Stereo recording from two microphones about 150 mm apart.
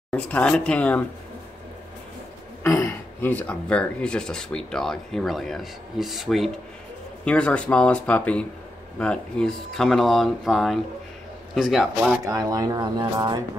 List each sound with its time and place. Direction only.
0.1 s speech: 10° left (ahead or behind)
2.6 s speech: 15° left (ahead or behind); by 12.2 s 5° right (ahead or behind)
12.3 s speech: 25° right (ahead or behind)